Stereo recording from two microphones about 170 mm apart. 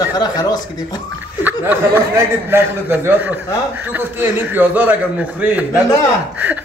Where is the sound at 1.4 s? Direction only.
10° right (ahead or behind).